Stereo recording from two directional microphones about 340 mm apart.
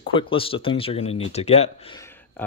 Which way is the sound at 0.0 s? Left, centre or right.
Centre.